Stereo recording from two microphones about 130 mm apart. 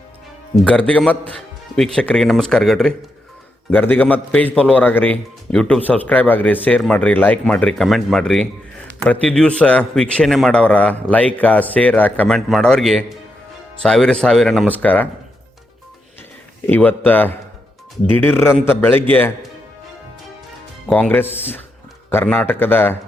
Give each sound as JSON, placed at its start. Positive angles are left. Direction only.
{"t": 0.5, "sound": "a man's voice", "side_deg": 10}
{"t": 3.7, "sound": "a man's voice", "side_deg": 15}
{"t": 14.7, "sound": "speech", "side_deg": 10}
{"t": 16.6, "sound": "speech", "side_deg": 15}
{"t": 20.8, "sound": "speech", "side_deg": 10}